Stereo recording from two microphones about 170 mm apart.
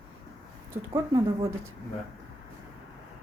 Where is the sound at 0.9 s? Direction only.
20° right (ahead or behind).